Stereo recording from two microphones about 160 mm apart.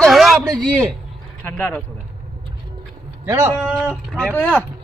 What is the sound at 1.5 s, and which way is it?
Speech, 10° left (ahead or behind).